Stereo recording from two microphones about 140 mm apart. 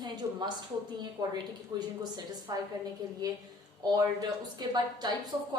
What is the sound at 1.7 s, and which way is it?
Speech, 30° right (ahead or behind).